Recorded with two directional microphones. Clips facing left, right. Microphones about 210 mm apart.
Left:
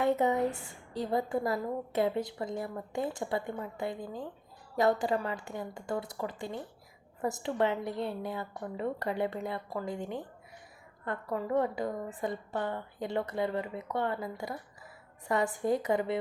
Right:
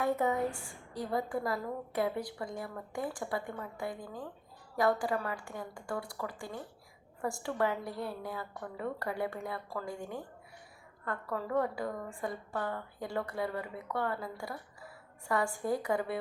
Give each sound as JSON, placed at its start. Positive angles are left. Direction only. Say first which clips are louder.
{"t": 0.0, "sound": "a woman's voice", "louder": "left 3 dB", "side_deg": 20}